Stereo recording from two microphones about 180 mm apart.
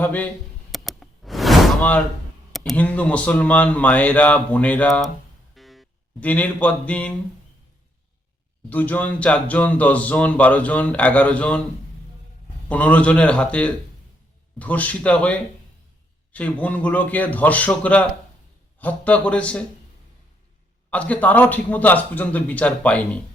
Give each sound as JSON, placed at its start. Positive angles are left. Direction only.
{"t": 0.0, "sound": "speech", "side_deg": 10}
{"t": 0.7, "sound": "a sound", "side_deg": 0}
{"t": 2.5, "sound": "speech", "side_deg": 0}
{"t": 5.5, "sound": "music", "side_deg": 0}
{"t": 8.7, "sound": "speech", "side_deg": 10}
{"t": 12.6, "sound": "speech", "side_deg": 10}
{"t": 20.9, "sound": "speech", "side_deg": 10}